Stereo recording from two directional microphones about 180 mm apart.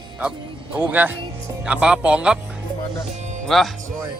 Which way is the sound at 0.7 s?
10° right (ahead or behind).